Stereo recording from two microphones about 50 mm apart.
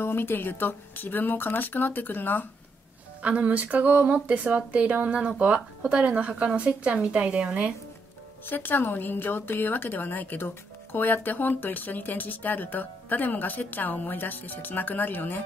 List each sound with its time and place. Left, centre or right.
0.0 s a woman's voice: left
3.2 s speech: right
8.5 s a woman's voice: left